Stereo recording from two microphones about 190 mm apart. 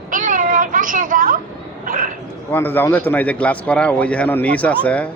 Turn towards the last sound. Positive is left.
turn(degrees=5)  # may be behind; listen again after turning